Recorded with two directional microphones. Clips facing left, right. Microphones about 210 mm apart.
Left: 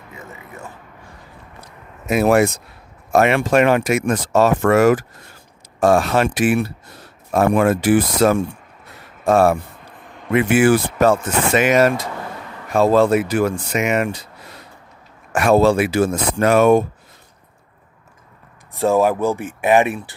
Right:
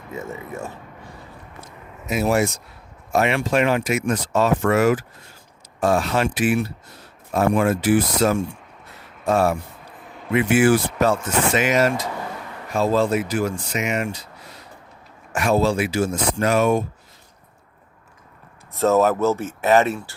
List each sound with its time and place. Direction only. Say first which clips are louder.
2.0 s speech: left 5 dB; 60° left (ahead or behind)
4.3 s speech: left 5 dB; 75° left (ahead or behind)
4.6 s speech: left 5 dB; 50° left (ahead or behind)
6.0 s speech: left 4 dB; 55° left (ahead or behind)
10.3 s speech: left 2 dB; 55° left (ahead or behind)
15.3 s speech: left 5 dB; 55° left (ahead or behind)
18.8 s speech: left 1 dB; 15° left (ahead or behind)